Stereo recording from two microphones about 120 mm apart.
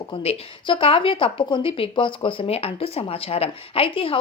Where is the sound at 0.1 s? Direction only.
50° left (ahead or behind).